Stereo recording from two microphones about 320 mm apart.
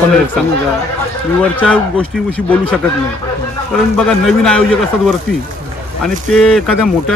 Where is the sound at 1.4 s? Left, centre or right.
Centre.